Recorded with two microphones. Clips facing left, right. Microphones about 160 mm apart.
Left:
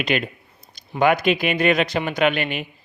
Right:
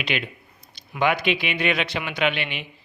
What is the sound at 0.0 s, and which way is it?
A man's voice, 45° left (ahead or behind).